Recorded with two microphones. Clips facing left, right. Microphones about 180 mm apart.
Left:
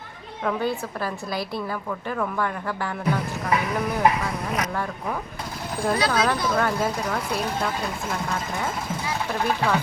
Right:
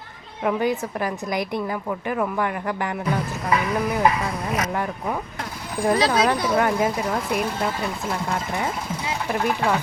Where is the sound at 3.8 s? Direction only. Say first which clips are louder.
Right 1 dB; 5° right (ahead or behind); by 6.3 s 20° right (ahead or behind).